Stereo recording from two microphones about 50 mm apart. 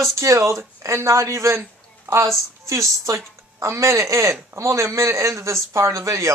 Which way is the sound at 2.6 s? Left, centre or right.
Right.